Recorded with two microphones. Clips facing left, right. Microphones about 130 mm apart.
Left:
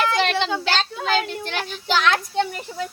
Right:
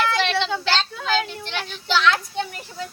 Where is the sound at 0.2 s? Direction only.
45° left (ahead or behind).